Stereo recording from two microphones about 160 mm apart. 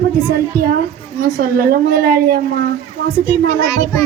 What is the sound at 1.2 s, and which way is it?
A woman's voice, 65° right (ahead or behind).